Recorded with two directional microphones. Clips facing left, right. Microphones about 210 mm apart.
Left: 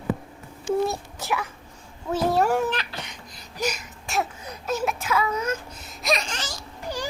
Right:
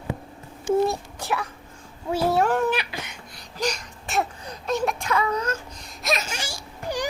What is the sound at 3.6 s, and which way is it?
Speech, 5° left (ahead or behind).